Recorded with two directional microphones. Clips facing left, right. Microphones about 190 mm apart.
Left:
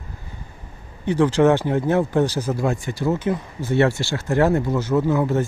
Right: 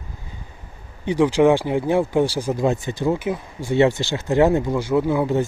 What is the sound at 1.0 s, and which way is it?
Speech, 15° right (ahead or behind).